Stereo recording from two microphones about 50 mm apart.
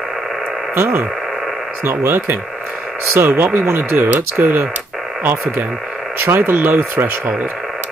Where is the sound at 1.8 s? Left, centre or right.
Right.